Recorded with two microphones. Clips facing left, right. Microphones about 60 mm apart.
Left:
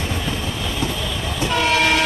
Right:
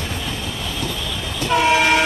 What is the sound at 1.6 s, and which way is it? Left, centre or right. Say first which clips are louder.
Train: right 2 dB; centre.